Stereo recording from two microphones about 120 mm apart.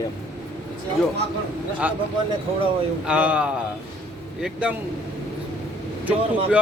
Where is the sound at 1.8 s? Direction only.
10° right (ahead or behind).